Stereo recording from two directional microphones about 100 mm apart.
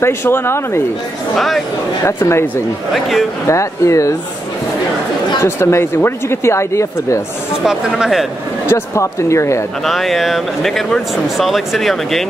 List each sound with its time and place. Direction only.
0.0 s speech: 25° left (ahead or behind)
1.3 s speech: centre (ahead or behind)
2.0 s speech: 25° left (ahead or behind)
2.9 s speech: centre (ahead or behind)
3.4 s speech: 30° left (ahead or behind)
5.4 s speech: 25° left (ahead or behind)
7.6 s speech: 5° right (ahead or behind)
8.6 s speech: 25° left (ahead or behind)
9.8 s speech: centre (ahead or behind)